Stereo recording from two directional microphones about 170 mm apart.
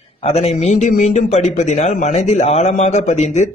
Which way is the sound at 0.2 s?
35° left (ahead or behind).